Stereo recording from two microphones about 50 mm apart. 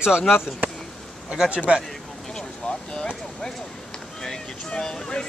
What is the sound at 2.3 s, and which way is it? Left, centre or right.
Speech, centre.